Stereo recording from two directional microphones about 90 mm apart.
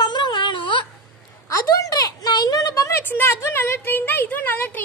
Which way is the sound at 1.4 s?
40° left (ahead or behind).